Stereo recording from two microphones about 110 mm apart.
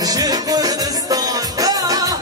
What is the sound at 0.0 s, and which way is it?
Music, 35° right (ahead or behind).